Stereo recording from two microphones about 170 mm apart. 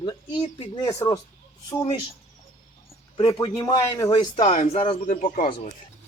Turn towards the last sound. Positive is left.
turn(degrees=50)  # may be behind; listen again after turning